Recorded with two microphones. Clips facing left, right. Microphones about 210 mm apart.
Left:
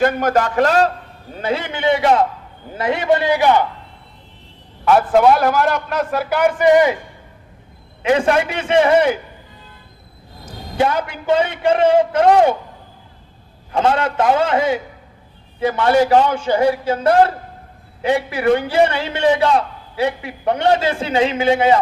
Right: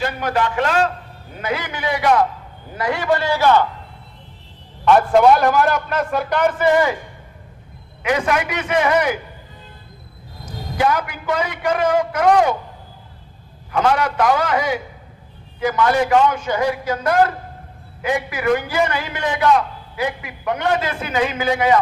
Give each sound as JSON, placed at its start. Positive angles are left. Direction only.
{"t": 0.0, "sound": "a man's voice", "side_deg": 45}
{"t": 1.4, "sound": "a man's voice", "side_deg": 25}
{"t": 4.9, "sound": "a man's voice", "side_deg": 0}
{"t": 8.0, "sound": "a man's voice", "side_deg": 30}
{"t": 10.8, "sound": "a man's voice", "side_deg": 25}
{"t": 13.7, "sound": "a man's voice", "side_deg": 25}